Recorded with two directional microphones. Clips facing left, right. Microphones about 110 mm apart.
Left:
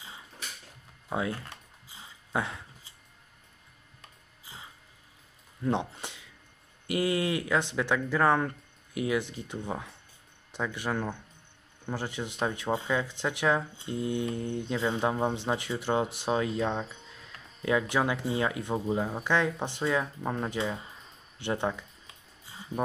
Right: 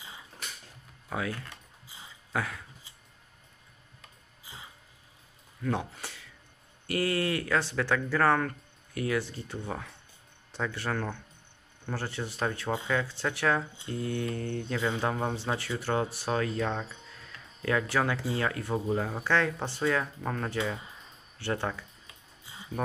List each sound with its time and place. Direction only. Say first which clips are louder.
1.1 s speech: left 2 dB; 25° left (ahead or behind)
2.3 s a sound: left 1 dB; 25° left (ahead or behind)
5.6 s speech: left 2 dB; 20° left (ahead or behind)